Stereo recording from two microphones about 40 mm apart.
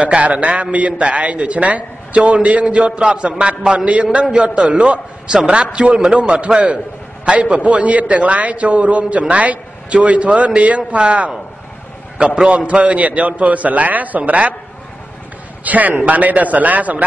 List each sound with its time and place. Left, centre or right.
0.0 s a man's voice: right
12.4 s a man's voice: right
15.6 s a man's voice: right